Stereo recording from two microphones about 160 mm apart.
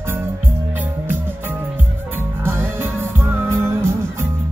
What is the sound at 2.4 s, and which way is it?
Music, 15° right (ahead or behind).